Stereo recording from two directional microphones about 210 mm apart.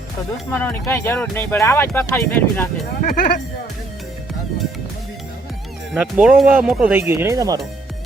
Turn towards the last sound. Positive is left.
turn(degrees=-15)  # may be behind; listen again after turning